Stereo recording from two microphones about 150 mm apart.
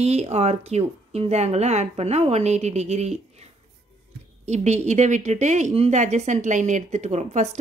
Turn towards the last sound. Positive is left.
turn(degrees=-45)  # may be behind; listen again after turning